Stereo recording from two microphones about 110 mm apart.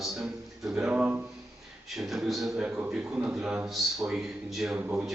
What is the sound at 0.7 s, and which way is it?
Speech, 10° right (ahead or behind).